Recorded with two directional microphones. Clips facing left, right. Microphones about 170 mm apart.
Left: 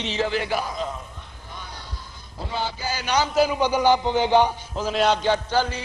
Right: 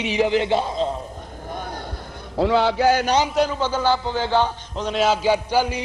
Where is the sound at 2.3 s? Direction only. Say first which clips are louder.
Right 12 dB; 85° right; by 3.0 s 70° right (ahead or behind).